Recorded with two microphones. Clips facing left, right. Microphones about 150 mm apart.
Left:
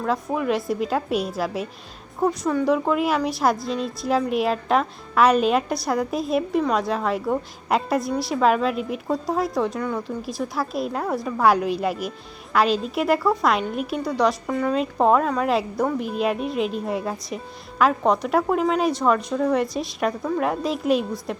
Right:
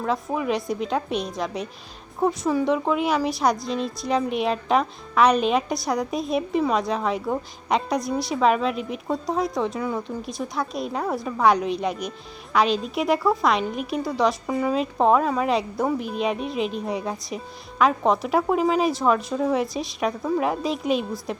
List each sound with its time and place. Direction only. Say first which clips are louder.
0.0 s speech: left 1 dB; centre (ahead or behind)